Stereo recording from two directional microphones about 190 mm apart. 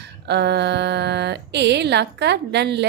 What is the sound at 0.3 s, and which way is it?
A woman's voice, 60° right (ahead or behind).